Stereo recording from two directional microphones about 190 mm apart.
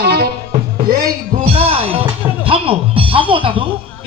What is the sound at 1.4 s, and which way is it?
A man's voice, 30° right (ahead or behind).